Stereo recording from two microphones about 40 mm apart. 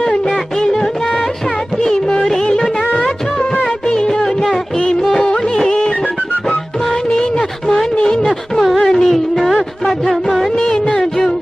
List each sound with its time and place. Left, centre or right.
0.0 s music: centre
3.9 s music of bollywood: centre
5.1 s music: left
7.6 s a sound: centre
8.7 s music of bollywood: centre
10.6 s music: left